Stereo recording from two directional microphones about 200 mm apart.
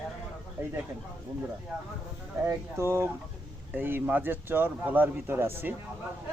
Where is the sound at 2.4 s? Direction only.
10° right (ahead or behind).